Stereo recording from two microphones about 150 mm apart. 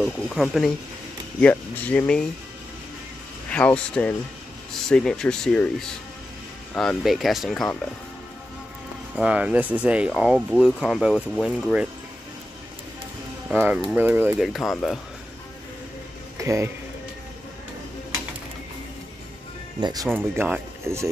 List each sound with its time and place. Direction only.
0.0 s speech: centre (ahead or behind)
3.4 s speech: 10° left (ahead or behind)
9.1 s speech: 10° right (ahead or behind)
13.5 s speech: 10° right (ahead or behind)
14.5 s speech: centre (ahead or behind)
16.3 s speech: 20° right (ahead or behind)
19.8 s speech: 25° right (ahead or behind)
20.1 s speech: 15° right (ahead or behind)